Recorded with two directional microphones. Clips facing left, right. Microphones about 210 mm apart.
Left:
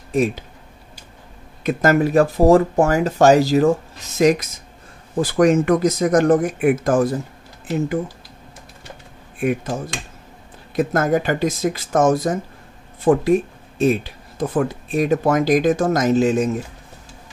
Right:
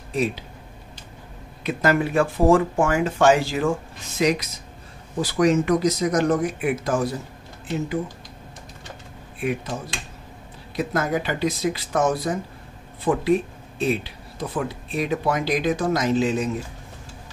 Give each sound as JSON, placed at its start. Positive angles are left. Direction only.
{"t": 0.1, "sound": "speech", "side_deg": 45}
{"t": 1.6, "sound": "speech", "side_deg": 45}
{"t": 9.4, "sound": "speech", "side_deg": 50}
{"t": 10.8, "sound": "speech", "side_deg": 50}